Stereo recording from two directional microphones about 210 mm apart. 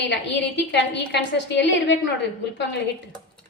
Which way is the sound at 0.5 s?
55° left (ahead or behind).